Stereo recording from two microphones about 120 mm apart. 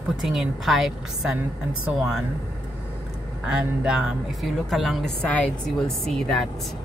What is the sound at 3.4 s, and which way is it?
A woman's voice, 5° right (ahead or behind).